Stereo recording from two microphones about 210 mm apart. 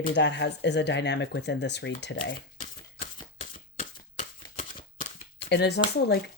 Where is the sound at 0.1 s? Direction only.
55° left (ahead or behind).